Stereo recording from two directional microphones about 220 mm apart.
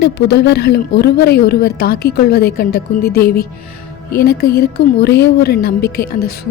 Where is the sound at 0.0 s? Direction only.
50° left (ahead or behind).